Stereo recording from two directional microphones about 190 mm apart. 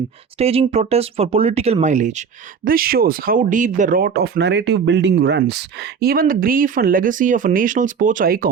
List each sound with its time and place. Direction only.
0.3 s speech: 30° right (ahead or behind)
2.6 s speech: 50° right (ahead or behind)